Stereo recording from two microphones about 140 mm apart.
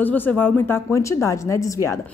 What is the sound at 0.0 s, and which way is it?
A woman's voice, 10° left (ahead or behind).